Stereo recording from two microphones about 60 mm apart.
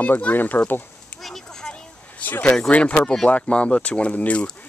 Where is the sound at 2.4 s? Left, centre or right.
Centre.